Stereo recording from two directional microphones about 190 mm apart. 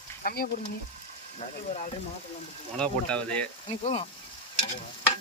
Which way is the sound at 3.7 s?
35° left (ahead or behind).